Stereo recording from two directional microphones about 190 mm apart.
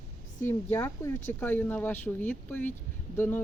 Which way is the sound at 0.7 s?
15° left (ahead or behind).